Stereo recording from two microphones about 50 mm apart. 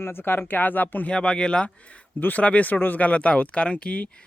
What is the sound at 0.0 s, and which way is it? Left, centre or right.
Speech, left.